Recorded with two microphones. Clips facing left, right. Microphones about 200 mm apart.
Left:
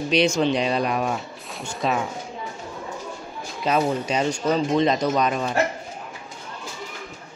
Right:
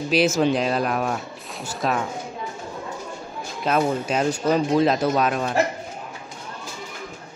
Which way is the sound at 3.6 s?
Centre (ahead or behind).